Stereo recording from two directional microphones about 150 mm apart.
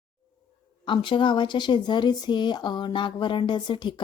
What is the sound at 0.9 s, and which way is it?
Speech, 30° left (ahead or behind).